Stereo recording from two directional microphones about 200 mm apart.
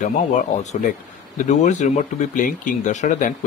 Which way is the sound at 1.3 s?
35° left (ahead or behind).